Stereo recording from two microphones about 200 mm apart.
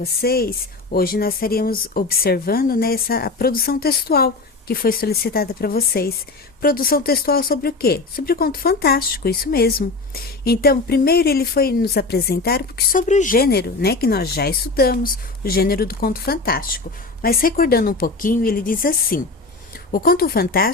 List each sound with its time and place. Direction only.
0.0 s speech: 50° left (ahead or behind)